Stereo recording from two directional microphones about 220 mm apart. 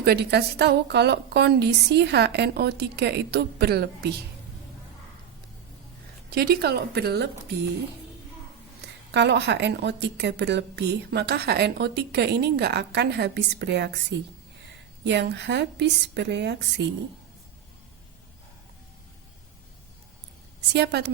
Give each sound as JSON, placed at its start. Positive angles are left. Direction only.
{"t": 0.0, "sound": "a woman's voice", "side_deg": -45}
{"t": 6.3, "sound": "a woman's voice", "side_deg": -45}
{"t": 9.1, "sound": "a woman's voice", "side_deg": -50}
{"t": 20.7, "sound": "a woman's voice", "side_deg": -50}